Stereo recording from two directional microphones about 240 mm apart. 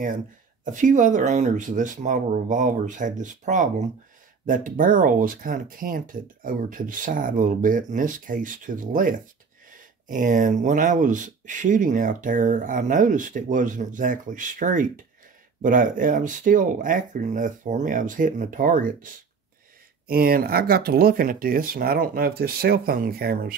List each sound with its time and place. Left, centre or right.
0.7 s speech: right